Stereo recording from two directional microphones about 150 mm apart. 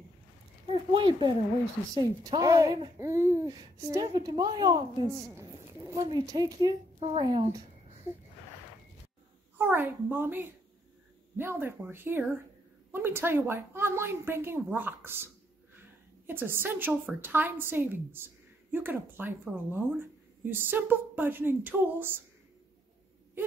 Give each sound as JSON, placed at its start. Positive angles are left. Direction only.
{"t": 0.7, "sound": "a woman's voice", "side_deg": -35}
{"t": 9.6, "sound": "a woman's voice", "side_deg": -15}